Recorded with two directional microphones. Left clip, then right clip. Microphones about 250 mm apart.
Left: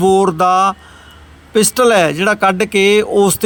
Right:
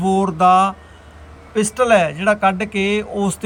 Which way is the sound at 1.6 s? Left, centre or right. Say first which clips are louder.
Left 3 dB; left.